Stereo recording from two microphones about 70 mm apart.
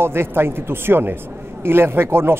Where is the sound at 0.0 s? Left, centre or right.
Right.